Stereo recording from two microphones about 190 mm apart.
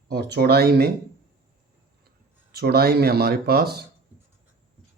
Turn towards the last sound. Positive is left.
turn(degrees=-55)  # may be behind; listen again after turning